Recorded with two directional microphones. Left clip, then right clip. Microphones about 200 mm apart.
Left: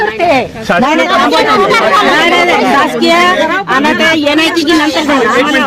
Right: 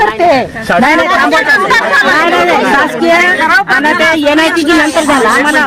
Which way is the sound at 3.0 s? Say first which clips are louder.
Even; 15° right (ahead or behind).